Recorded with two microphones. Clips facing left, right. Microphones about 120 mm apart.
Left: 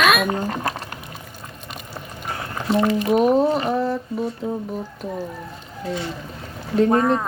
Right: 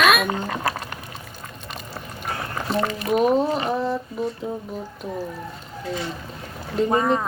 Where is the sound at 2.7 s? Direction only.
15° left (ahead or behind).